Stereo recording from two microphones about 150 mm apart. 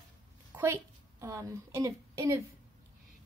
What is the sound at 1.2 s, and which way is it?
A woman's voice, 20° right (ahead or behind).